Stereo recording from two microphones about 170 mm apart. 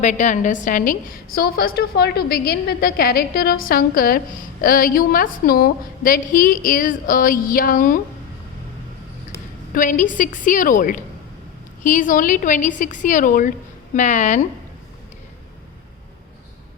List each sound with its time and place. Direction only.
0.0 s a woman's voice: 45° left (ahead or behind)
9.7 s a woman's voice: 50° left (ahead or behind)